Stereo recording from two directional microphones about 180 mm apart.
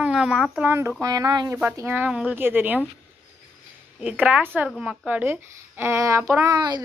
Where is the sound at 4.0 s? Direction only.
5° right (ahead or behind).